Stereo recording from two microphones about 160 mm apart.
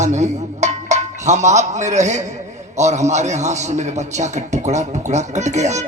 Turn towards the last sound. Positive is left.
turn(degrees=-45)  # may be behind; listen again after turning